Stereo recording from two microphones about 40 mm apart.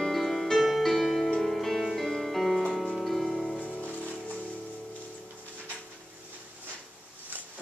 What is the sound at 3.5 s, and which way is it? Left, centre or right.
Music, left.